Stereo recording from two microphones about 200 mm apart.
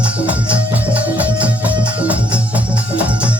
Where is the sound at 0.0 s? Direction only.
5° right (ahead or behind).